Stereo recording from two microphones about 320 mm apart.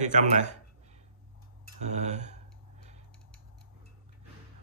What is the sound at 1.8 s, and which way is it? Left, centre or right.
Speech, right.